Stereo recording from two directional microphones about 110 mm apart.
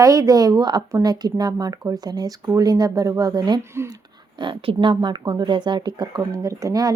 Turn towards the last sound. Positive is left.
turn(degrees=-30)  # may be behind; listen again after turning